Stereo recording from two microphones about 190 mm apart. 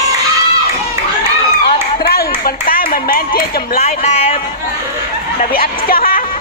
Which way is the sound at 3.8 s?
35° left (ahead or behind).